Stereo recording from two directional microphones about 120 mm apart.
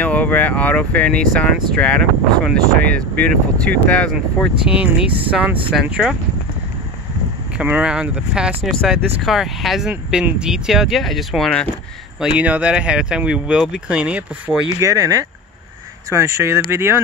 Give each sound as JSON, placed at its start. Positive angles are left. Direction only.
{"t": 0.0, "sound": "speech", "side_deg": 10}
{"t": 4.6, "sound": "speech", "side_deg": -10}
{"t": 7.5, "sound": "speech", "side_deg": -10}
{"t": 8.6, "sound": "speech", "side_deg": 0}
{"t": 12.2, "sound": "speech", "side_deg": -10}
{"t": 14.8, "sound": "speech", "side_deg": -25}